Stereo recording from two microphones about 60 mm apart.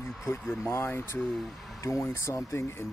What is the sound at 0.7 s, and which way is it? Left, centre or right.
Speech, left.